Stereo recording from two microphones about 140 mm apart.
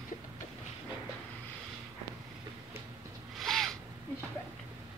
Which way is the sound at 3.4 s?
Centre (ahead or behind).